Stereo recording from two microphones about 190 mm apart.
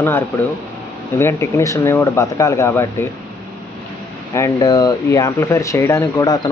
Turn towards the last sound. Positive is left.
turn(degrees=20)  # may be behind; listen again after turning